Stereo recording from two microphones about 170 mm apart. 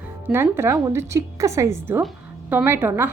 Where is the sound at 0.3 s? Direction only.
15° right (ahead or behind).